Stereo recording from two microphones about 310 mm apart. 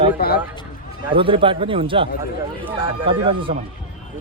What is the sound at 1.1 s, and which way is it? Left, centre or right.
Speech, centre.